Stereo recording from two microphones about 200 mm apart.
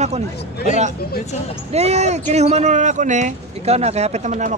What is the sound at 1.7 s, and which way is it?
Speech, 30° right (ahead or behind).